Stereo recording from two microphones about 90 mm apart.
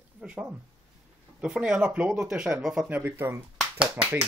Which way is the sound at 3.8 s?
10° right (ahead or behind).